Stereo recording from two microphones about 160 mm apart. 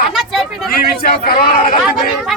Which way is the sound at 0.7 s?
65° left (ahead or behind).